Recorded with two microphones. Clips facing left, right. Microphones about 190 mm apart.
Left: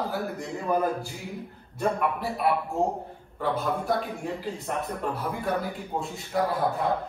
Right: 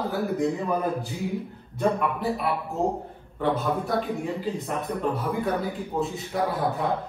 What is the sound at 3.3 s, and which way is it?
A man's voice, centre (ahead or behind).